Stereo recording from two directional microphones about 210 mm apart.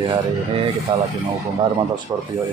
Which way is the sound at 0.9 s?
25° right (ahead or behind).